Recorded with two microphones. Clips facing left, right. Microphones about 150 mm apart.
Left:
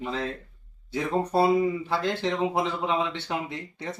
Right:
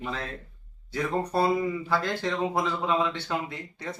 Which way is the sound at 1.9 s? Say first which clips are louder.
Left 1 dB; 20° left (ahead or behind).